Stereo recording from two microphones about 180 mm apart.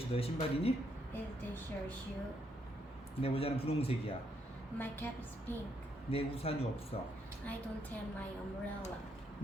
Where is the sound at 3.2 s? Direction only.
30° left (ahead or behind).